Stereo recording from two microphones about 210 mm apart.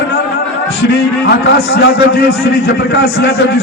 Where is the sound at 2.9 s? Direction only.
50° left (ahead or behind).